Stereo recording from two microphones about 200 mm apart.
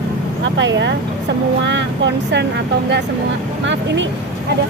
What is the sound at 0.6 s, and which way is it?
Speech, 65° right (ahead or behind).